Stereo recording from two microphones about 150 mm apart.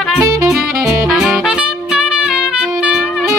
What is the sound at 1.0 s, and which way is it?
Music, 5° right (ahead or behind).